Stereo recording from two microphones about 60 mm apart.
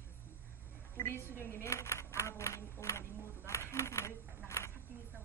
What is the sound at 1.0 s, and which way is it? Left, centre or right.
Speech, left.